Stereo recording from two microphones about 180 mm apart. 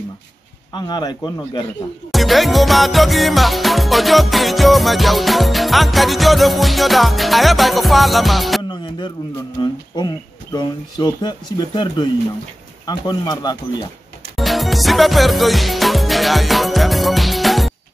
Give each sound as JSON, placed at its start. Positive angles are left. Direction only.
{"t": 0.7, "sound": "speech", "side_deg": 25}
{"t": 2.1, "sound": "music", "side_deg": 0}
{"t": 9.6, "sound": "speech", "side_deg": 25}
{"t": 14.3, "sound": "music", "side_deg": 0}